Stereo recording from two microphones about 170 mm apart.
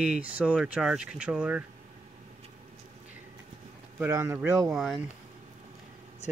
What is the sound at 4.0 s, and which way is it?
Speech, 15° right (ahead or behind).